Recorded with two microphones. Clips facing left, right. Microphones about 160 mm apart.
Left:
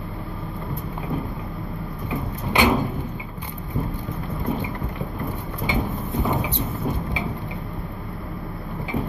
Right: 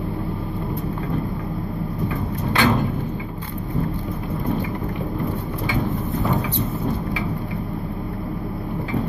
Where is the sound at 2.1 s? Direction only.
15° left (ahead or behind).